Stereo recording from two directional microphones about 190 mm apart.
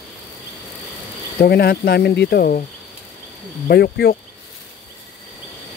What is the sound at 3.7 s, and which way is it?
Speech, 55° left (ahead or behind).